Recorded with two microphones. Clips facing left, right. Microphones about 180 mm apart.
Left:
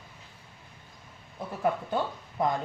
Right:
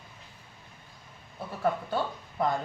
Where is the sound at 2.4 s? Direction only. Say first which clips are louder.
Even; 20° left (ahead or behind).